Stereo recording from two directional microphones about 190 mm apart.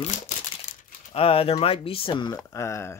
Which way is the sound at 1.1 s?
30° left (ahead or behind).